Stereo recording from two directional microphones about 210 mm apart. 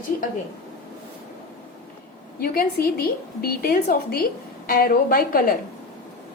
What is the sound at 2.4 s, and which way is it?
A woman's voice, 45° left (ahead or behind).